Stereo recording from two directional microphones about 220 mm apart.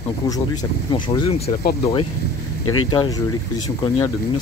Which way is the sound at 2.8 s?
20° left (ahead or behind).